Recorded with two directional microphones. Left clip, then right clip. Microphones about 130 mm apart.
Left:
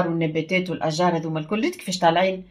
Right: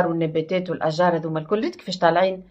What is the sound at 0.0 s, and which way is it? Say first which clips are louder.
Speech: right 2 dB; 15° left (ahead or behind).